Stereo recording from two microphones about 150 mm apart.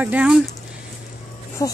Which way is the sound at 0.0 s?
10° right (ahead or behind).